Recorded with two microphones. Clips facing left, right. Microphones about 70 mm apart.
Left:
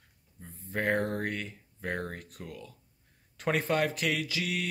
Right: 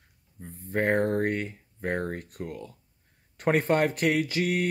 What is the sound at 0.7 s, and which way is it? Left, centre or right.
Speech, right.